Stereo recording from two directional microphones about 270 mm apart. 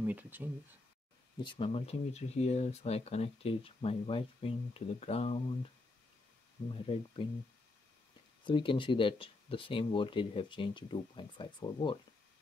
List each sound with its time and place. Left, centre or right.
0.0 s speech: centre
1.4 s speech: centre
6.7 s speech: centre
8.5 s speech: centre